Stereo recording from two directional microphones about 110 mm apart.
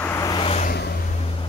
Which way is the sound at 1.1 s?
65° left (ahead or behind).